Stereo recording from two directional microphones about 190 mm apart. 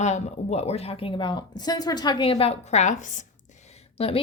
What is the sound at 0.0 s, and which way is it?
A woman's voice, 35° left (ahead or behind).